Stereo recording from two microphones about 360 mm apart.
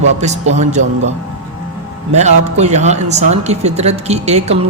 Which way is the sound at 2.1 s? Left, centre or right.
Centre.